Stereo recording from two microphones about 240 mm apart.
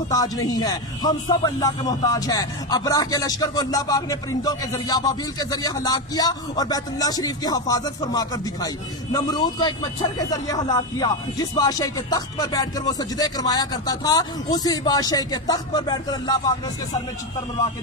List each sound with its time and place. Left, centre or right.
0.5 s speech: centre